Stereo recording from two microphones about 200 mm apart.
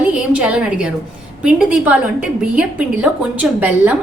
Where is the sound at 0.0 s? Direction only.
5° right (ahead or behind).